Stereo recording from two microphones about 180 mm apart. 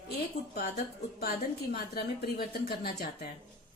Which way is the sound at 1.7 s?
60° left (ahead or behind).